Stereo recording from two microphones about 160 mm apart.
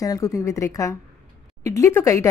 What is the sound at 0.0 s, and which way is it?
A woman's voice, 20° left (ahead or behind).